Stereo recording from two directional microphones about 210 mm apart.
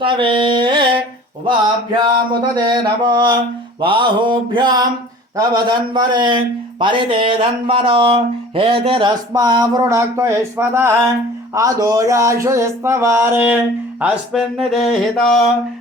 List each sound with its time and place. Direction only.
0.0 s mantra: 25° right (ahead or behind)
2.3 s a man's voice: 20° right (ahead or behind)
11.5 s a sound: 15° right (ahead or behind)
14.0 s speech: 5° right (ahead or behind)